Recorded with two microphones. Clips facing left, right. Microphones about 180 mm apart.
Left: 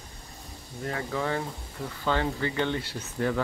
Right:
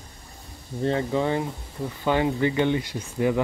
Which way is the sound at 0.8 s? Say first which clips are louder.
Right 7 dB; 25° right (ahead or behind).